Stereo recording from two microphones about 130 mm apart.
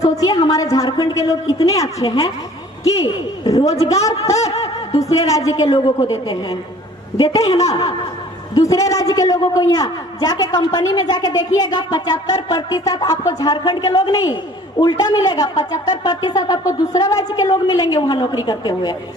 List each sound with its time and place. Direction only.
0.0 s a man's voice: 30° left (ahead or behind)
3.4 s a man's voice: 25° left (ahead or behind)
8.5 s a man's voice: 25° left (ahead or behind)